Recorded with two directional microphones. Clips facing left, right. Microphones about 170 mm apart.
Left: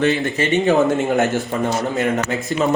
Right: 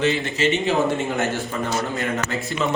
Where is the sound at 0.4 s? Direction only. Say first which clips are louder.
Right 3 dB; 55° left (ahead or behind).